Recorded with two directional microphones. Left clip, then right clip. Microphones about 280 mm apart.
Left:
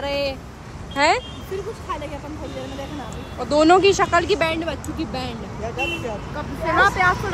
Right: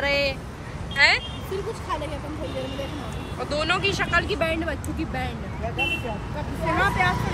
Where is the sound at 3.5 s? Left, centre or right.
Left.